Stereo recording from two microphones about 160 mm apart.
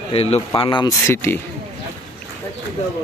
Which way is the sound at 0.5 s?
30° left (ahead or behind).